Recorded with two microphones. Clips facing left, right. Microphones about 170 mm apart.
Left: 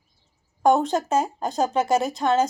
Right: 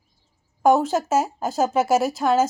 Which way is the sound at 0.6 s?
5° right (ahead or behind).